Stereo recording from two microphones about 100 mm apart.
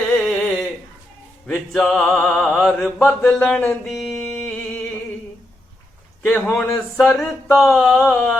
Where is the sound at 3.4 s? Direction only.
10° left (ahead or behind).